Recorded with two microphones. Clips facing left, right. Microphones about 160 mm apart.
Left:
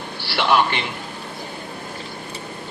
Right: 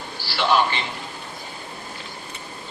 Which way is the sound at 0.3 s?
60° left (ahead or behind).